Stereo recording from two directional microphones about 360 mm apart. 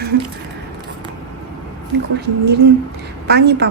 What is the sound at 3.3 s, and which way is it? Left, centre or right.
Speech, right.